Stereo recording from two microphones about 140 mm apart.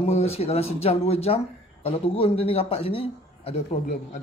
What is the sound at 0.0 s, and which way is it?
Speech, 50° left (ahead or behind).